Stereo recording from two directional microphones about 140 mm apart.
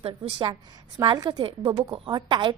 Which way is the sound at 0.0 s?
40° right (ahead or behind).